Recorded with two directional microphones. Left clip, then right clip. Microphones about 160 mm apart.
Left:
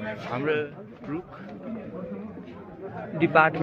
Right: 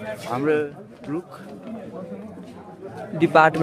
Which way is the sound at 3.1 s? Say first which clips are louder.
Right 4 dB; 50° right (ahead or behind).